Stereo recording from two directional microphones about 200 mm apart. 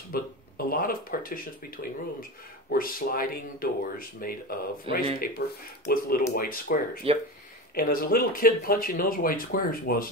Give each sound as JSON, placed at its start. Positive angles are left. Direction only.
{"t": 0.1, "sound": "speech", "side_deg": 50}
{"t": 4.9, "sound": "speech", "side_deg": -25}
{"t": 5.2, "sound": "speech", "side_deg": 45}
{"t": 7.0, "sound": "speech", "side_deg": -30}
{"t": 7.7, "sound": "speech", "side_deg": 45}